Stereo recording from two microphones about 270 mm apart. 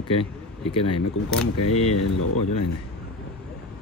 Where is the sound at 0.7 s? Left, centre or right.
Left.